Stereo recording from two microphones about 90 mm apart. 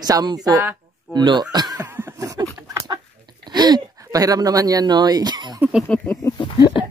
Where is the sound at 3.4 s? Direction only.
50° right (ahead or behind).